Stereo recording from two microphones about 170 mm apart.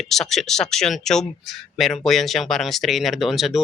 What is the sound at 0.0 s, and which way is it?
Speech, centre (ahead or behind).